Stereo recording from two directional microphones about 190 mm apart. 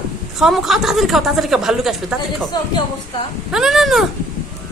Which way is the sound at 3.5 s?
Centre (ahead or behind).